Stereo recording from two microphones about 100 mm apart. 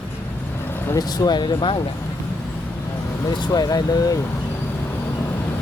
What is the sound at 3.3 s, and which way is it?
Speech, 45° left (ahead or behind).